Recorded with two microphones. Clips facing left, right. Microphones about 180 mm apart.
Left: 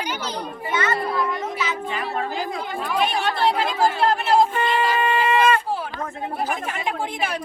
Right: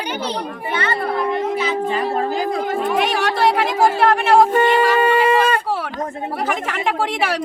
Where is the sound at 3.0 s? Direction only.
80° right.